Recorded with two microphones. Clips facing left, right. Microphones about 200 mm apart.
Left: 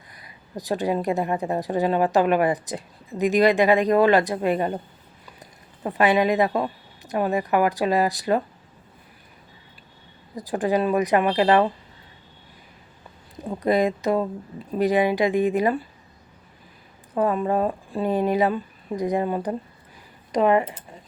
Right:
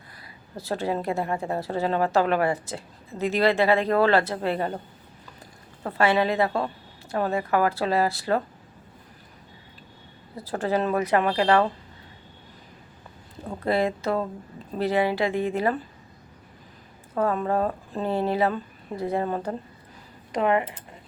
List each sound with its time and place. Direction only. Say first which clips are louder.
0.2 s a woman's voice: left 4 dB; 15° left (ahead or behind)
5.8 s a woman's voice: left 2 dB; 15° left (ahead or behind)
10.3 s a woman's voice: left 3 dB; 15° left (ahead or behind)
13.4 s a woman's voice: left 3 dB; 15° left (ahead or behind)
17.2 s a woman's voice: left 2 dB; 15° left (ahead or behind)
20.4 s speech: left 4 dB; 30° left (ahead or behind)